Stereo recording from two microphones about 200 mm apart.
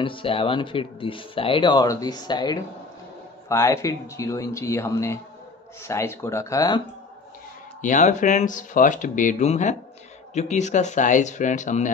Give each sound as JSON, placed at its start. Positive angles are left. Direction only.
{"t": 0.0, "sound": "speech", "side_deg": 25}
{"t": 7.8, "sound": "speech", "side_deg": 40}